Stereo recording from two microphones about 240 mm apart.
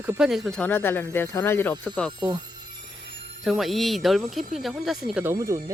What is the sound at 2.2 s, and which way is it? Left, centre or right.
Speech, centre.